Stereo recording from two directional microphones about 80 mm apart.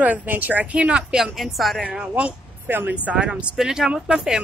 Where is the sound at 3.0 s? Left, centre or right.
Centre.